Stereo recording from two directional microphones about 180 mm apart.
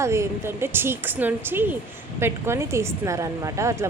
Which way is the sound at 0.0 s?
15° right (ahead or behind).